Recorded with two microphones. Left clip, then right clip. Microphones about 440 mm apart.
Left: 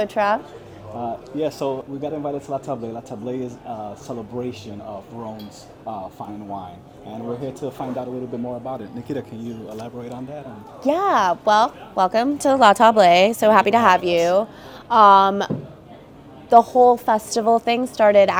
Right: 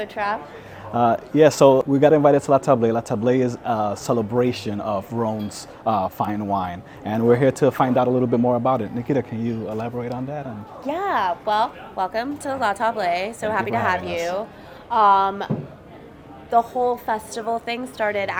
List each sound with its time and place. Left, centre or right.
0.0 s a woman's voice: left
0.9 s speech: right
6.0 s speech: right
7.9 s speech: right
9.0 s speech: centre
10.8 s a woman's voice: left
16.5 s a woman's voice: left